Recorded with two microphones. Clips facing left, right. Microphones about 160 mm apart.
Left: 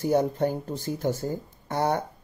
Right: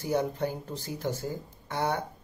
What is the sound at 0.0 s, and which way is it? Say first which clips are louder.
Speech: left 5 dB; 50° left (ahead or behind).